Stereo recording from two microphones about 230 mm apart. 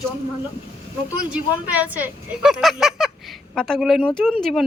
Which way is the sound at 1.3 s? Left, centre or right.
Centre.